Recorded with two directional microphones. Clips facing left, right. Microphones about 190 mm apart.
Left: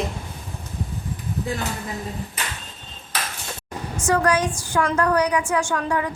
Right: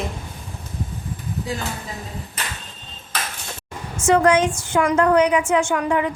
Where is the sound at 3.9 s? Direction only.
25° right (ahead or behind).